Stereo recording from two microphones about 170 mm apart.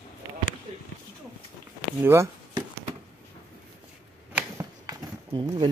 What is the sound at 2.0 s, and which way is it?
Chop, 15° right (ahead or behind).